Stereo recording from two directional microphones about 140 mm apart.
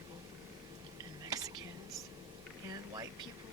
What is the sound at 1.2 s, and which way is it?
Whispering, 25° right (ahead or behind).